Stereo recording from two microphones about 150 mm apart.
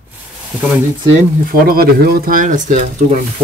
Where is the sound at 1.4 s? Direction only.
80° right; by 3.2 s 55° right (ahead or behind).